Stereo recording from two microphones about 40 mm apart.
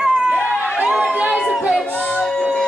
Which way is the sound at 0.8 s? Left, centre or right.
Centre.